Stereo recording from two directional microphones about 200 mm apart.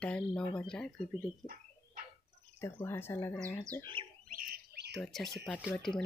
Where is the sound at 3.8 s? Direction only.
25° right (ahead or behind).